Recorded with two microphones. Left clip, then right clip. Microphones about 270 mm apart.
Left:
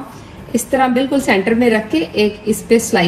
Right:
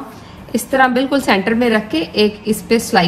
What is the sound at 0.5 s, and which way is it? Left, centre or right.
A woman's voice, centre.